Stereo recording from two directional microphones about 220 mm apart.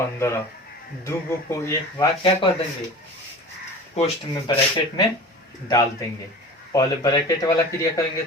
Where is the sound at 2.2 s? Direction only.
25° left (ahead or behind).